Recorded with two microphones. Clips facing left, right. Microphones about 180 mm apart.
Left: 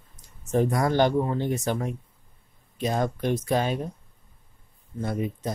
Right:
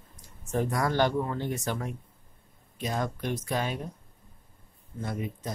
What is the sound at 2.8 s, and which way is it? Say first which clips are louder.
Speech: left 6 dB; 30° left (ahead or behind).